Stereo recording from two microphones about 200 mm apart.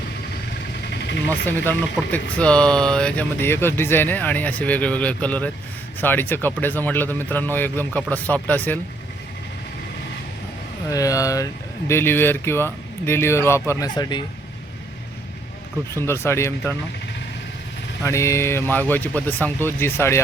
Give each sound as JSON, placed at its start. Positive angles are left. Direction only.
{"t": 1.5, "sound": "speech", "side_deg": 10}
{"t": 10.8, "sound": "speech", "side_deg": 15}
{"t": 16.0, "sound": "speech", "side_deg": 15}
{"t": 18.0, "sound": "speech", "side_deg": 15}